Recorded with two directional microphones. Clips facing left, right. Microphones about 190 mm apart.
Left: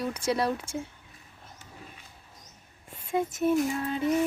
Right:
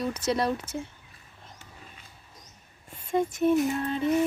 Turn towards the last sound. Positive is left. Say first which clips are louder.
# right 1 dB
turn(degrees=5)  # may be behind; listen again after turning